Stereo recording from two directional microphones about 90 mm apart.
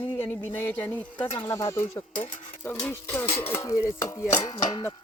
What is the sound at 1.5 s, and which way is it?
Speech, 35° left (ahead or behind).